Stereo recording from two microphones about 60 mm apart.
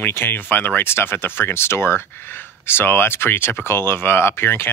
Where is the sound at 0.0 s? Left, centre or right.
Left.